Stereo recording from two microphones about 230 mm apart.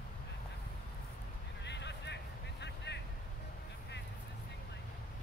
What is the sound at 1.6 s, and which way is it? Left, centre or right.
Vehicle, left.